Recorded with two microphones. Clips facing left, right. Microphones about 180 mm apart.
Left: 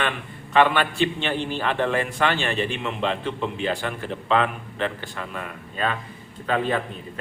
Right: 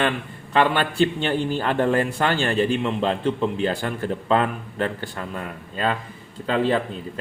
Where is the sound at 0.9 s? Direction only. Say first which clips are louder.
Right 3 dB; 40° right (ahead or behind).